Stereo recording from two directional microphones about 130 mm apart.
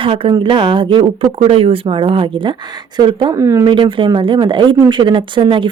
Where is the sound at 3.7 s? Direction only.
40° right (ahead or behind).